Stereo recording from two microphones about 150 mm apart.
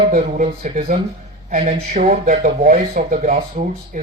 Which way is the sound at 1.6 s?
45° right (ahead or behind).